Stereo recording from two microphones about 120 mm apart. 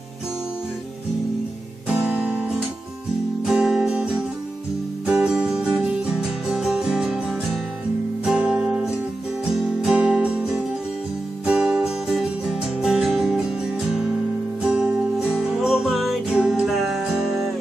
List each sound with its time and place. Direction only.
1.9 s music: 10° right (ahead or behind)
3.4 s music: 5° right (ahead or behind)